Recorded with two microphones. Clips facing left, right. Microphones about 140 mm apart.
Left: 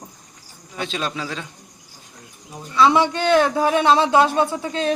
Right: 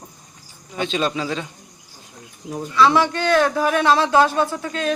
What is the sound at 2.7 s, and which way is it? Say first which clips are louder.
A woman's voice: even; 20° left (ahead or behind).